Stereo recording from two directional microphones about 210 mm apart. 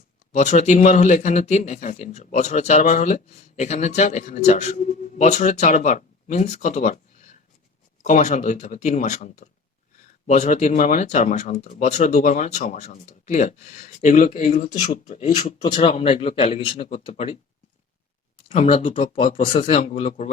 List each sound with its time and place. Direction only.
0.3 s speech: 35° left (ahead or behind)
8.0 s speech: 35° left (ahead or behind)
18.4 s speech: 30° left (ahead or behind)